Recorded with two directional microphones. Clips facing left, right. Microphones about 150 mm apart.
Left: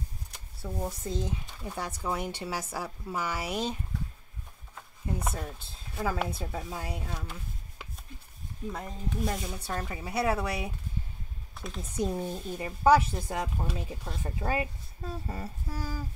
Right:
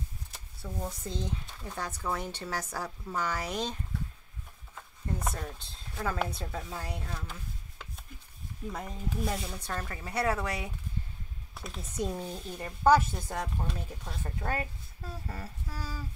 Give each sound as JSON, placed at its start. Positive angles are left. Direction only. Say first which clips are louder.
{"t": 0.6, "sound": "speech", "louder": "left 3 dB", "side_deg": 10}
{"t": 4.7, "sound": "speech", "louder": "left 2 dB", "side_deg": 5}
{"t": 8.7, "sound": "speech", "louder": "even", "side_deg": 0}
{"t": 11.5, "sound": "speech", "louder": "left 3 dB", "side_deg": 0}
{"t": 14.2, "sound": "speech", "louder": "left 3 dB", "side_deg": 15}
{"t": 15.2, "sound": "humming", "louder": "left 3 dB", "side_deg": 20}